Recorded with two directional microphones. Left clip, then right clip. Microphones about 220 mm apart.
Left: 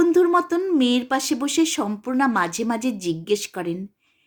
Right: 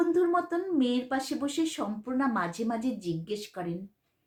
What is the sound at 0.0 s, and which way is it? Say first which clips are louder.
Speech: left 9 dB; 45° left (ahead or behind).